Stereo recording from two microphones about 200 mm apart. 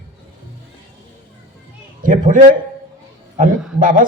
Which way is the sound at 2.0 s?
40° right (ahead or behind).